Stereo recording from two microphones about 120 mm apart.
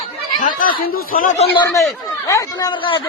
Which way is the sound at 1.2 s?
90° left.